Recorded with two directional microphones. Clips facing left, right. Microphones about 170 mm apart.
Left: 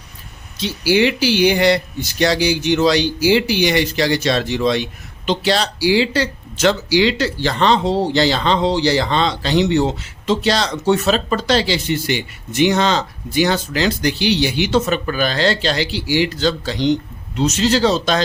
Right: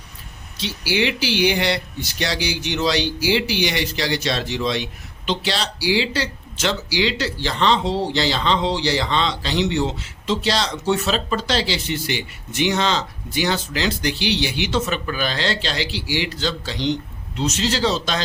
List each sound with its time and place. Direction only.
0.5 s speech: 45° left (ahead or behind)